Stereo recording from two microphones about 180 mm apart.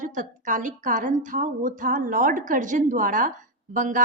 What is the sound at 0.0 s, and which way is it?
A woman's voice, 45° right (ahead or behind).